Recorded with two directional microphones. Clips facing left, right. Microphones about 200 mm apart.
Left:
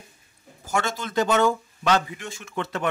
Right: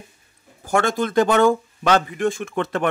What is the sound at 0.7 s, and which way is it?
Speech, 55° right (ahead or behind).